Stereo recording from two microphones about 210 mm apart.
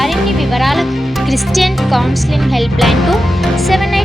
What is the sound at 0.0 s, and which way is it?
Speech, centre (ahead or behind).